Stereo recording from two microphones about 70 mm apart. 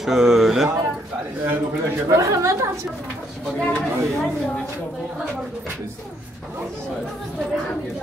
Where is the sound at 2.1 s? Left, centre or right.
Right.